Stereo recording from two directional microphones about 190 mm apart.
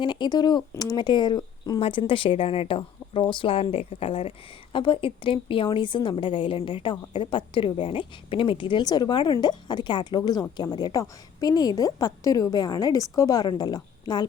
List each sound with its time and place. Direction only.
0.0 s speech: 25° left (ahead or behind)